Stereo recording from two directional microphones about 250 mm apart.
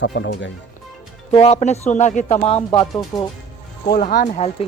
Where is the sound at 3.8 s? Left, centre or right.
Left.